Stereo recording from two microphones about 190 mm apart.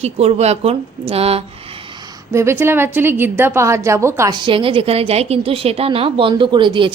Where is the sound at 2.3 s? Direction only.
15° right (ahead or behind).